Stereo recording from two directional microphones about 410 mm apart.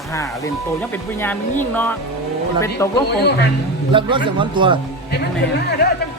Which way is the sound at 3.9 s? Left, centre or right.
Centre.